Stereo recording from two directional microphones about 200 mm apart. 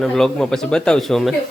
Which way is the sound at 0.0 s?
Centre (ahead or behind).